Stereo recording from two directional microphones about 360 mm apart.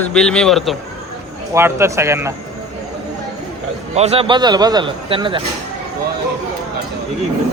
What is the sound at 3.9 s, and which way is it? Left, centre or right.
A man's voice, centre.